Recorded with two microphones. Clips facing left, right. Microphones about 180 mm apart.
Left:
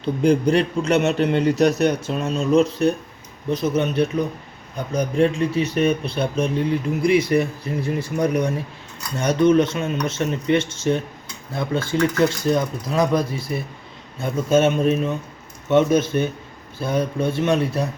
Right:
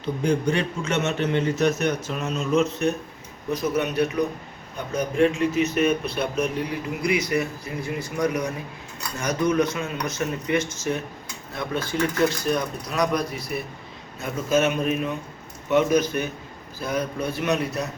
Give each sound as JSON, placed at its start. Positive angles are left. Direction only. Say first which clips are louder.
{"t": 0.0, "sound": "speech", "louder": "left 5 dB", "side_deg": 35}